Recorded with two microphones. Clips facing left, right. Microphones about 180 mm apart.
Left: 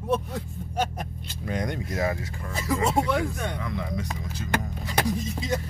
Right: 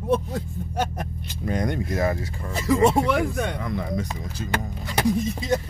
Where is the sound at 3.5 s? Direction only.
40° right (ahead or behind).